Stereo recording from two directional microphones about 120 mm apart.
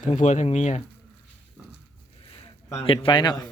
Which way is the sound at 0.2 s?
80° left.